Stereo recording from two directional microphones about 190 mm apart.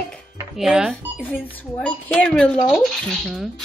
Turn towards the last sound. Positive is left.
turn(degrees=0)  # may be behind; listen again after turning